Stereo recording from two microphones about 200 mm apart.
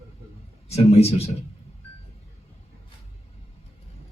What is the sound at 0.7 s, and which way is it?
Speech, 30° left (ahead or behind).